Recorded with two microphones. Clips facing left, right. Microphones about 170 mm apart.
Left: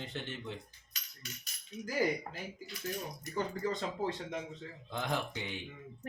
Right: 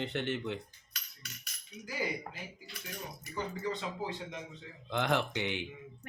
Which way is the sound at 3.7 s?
45° left (ahead or behind).